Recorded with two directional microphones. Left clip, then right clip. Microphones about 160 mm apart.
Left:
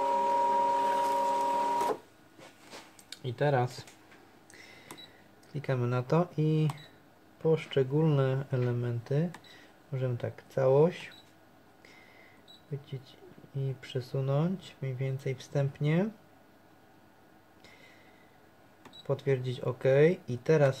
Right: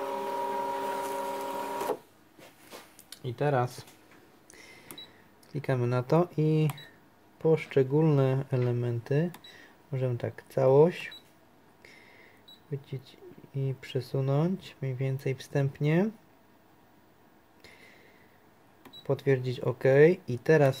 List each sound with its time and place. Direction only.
0.0 s boat: 5° right (ahead or behind)
0.6 s vehicle: centre (ahead or behind)
3.1 s speech: 20° right (ahead or behind)
4.5 s cash register: 30° right (ahead or behind)
5.5 s speech: 35° right (ahead or behind)
13.7 s speech: 40° right (ahead or behind)
19.0 s speech: 40° right (ahead or behind)